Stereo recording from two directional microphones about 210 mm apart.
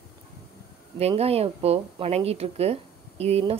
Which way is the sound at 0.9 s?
30° right (ahead or behind).